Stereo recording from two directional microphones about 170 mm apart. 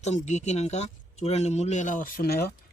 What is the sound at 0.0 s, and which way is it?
Speech, 40° left (ahead or behind).